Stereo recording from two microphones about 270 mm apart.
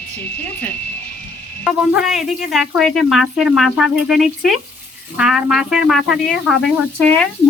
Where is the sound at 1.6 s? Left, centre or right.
Centre.